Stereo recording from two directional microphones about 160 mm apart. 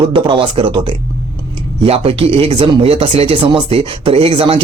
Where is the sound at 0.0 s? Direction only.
35° right (ahead or behind).